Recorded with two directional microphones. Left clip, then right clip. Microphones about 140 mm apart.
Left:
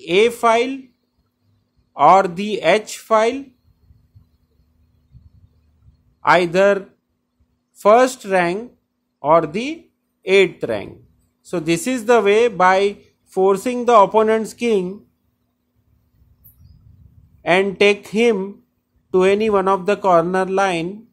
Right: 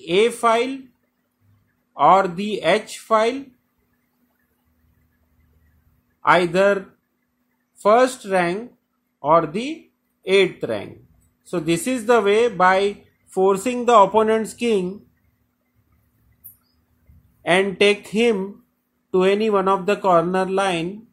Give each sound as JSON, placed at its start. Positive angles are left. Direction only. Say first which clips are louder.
{"t": 0.0, "sound": "speech", "louder": "left 3 dB", "side_deg": 15}
{"t": 2.0, "sound": "speech", "louder": "left 3 dB", "side_deg": 15}
{"t": 6.2, "sound": "speech", "louder": "left 2 dB", "side_deg": 10}
{"t": 7.8, "sound": "speech", "louder": "left 3 dB", "side_deg": 20}
{"t": 13.3, "sound": "speech", "louder": "left 2 dB", "side_deg": 0}
{"t": 17.4, "sound": "speech", "louder": "left 2 dB", "side_deg": 10}
{"t": 19.0, "sound": "speech", "louder": "left 3 dB", "side_deg": 5}